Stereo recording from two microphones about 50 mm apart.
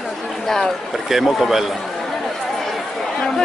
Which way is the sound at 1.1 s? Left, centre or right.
Centre.